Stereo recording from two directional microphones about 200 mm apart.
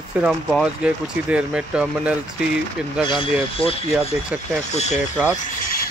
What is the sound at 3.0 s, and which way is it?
Speech, 25° left (ahead or behind).